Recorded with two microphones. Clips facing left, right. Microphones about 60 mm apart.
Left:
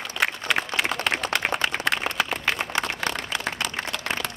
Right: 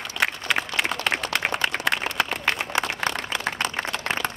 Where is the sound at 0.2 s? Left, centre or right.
Centre.